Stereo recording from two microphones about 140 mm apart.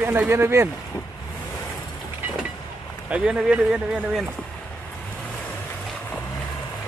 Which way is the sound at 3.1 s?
5° right (ahead or behind).